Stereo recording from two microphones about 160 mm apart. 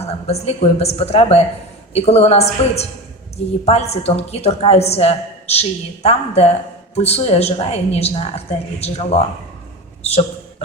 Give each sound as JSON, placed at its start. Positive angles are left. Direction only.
{"t": 0.0, "sound": "a woman's voice", "side_deg": 40}